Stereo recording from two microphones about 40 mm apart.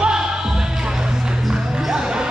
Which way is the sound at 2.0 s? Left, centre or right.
Centre.